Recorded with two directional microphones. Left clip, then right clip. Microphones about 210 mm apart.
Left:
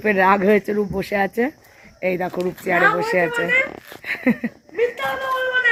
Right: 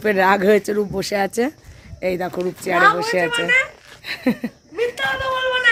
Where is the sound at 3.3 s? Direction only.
15° right (ahead or behind).